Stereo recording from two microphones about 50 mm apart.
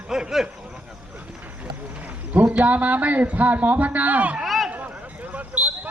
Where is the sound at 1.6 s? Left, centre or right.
Right.